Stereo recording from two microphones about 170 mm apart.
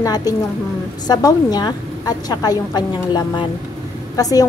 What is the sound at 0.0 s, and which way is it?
A woman's voice, 20° left (ahead or behind).